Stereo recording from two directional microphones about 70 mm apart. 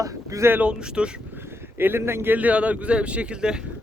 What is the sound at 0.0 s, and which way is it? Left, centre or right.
Speech, right.